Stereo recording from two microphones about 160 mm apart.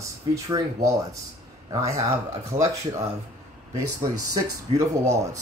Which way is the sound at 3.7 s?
20° right (ahead or behind).